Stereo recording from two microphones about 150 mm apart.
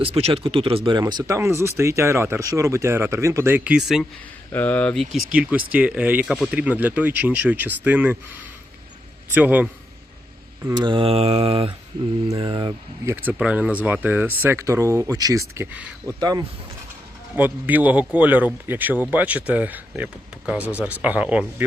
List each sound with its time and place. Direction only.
0.0 s mantra: 40° right (ahead or behind)
0.9 s speech: 30° right (ahead or behind); by 4.0 s 5° right (ahead or behind)
4.5 s speech: 10° left (ahead or behind)
5.3 s speech: 5° right (ahead or behind)
6.6 s speech: 10° right (ahead or behind)
9.3 s speech: 10° right (ahead or behind)
10.8 s mantra: 35° right (ahead or behind)
13.1 s speech: 10° right (ahead or behind)
15.6 s speech: 10° right (ahead or behind)
16.0 s speech: 25° right (ahead or behind)
17.3 s speech: 10° right (ahead or behind)